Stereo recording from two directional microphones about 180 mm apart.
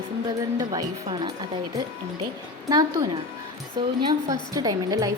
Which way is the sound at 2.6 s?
20° right (ahead or behind).